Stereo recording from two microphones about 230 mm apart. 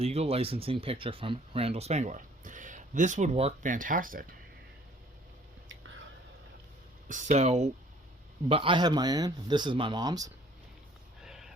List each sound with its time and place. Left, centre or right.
0.0 s speech: right
7.1 s speech: right; by 10.3 s centre
11.2 s a sound: centre